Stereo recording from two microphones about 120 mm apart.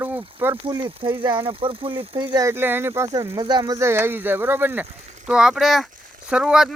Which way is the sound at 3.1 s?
35° right (ahead or behind).